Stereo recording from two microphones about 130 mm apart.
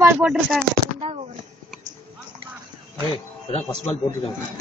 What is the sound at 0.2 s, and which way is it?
Speech, 5° right (ahead or behind).